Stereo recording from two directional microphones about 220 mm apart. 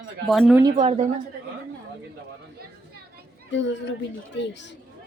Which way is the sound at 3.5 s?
55° left (ahead or behind).